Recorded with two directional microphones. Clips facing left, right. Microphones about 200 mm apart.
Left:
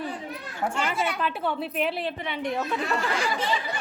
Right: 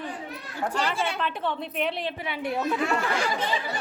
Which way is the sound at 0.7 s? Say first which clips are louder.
Right 1 dB; 30° right (ahead or behind).